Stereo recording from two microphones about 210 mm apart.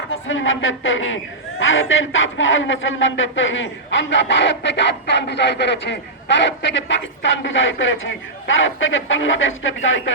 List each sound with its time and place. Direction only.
0.1 s a man's voice: 65° left (ahead or behind)